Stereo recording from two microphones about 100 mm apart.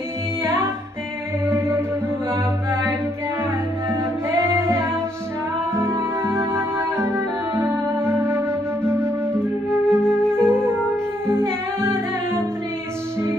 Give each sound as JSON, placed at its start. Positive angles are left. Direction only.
{"t": 3.9, "sound": "music", "side_deg": -25}
{"t": 9.8, "sound": "flute", "side_deg": 10}
{"t": 11.2, "sound": "music", "side_deg": -25}